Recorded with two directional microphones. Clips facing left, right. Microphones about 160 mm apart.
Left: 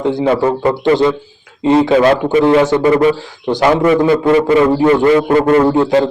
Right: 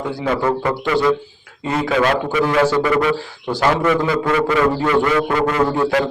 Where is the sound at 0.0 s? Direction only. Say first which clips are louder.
Left 7 dB; 25° left (ahead or behind).